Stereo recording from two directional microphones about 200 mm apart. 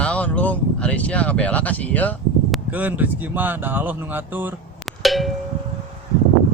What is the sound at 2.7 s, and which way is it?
Speech, 10° right (ahead or behind).